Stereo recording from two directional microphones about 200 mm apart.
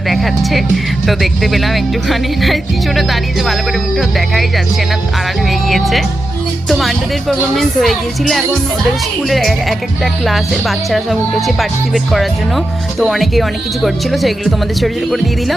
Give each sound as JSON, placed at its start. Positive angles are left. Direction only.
{"t": 0.1, "sound": "music", "side_deg": 0}
{"t": 1.0, "sound": "speech", "side_deg": 0}